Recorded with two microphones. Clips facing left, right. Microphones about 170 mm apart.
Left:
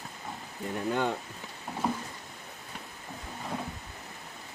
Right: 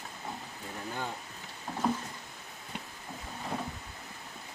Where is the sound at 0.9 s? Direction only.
70° left (ahead or behind).